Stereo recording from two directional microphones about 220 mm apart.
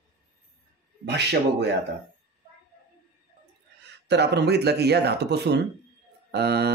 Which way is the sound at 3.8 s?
50° right (ahead or behind).